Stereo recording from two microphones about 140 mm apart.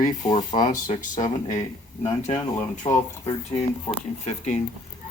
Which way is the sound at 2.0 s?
50° left (ahead or behind).